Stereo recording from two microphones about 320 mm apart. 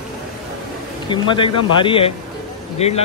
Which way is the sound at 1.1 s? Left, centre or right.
Centre.